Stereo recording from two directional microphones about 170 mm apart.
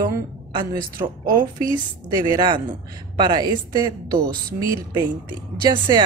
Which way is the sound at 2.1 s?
25° right (ahead or behind).